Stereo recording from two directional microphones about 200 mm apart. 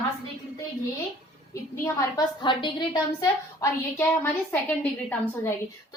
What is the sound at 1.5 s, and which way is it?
A woman's voice, 15° left (ahead or behind).